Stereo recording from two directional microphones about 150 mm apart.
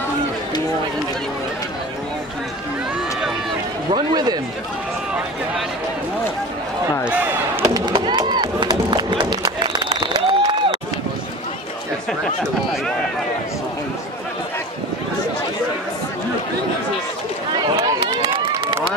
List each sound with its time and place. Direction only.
3.9 s a man's voice: 25° right (ahead or behind)
7.1 s slam: 10° right (ahead or behind)
7.7 s chop: 30° right (ahead or behind)
17.7 s a sound: 35° right (ahead or behind)